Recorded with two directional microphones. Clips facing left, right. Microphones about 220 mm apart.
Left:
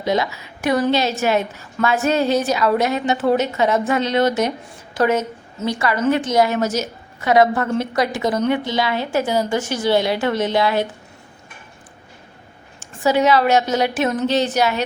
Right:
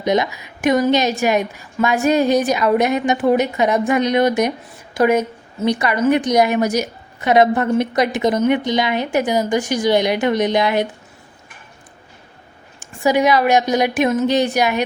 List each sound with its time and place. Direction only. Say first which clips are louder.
0.0 s a woman's voice: right 2 dB; 20° right (ahead or behind)
12.8 s a woman's voice: right 1 dB; 15° right (ahead or behind)